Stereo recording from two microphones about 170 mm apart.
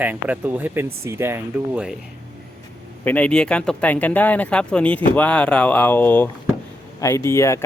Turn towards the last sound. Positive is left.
turn(degrees=15)  # may be behind; listen again after turning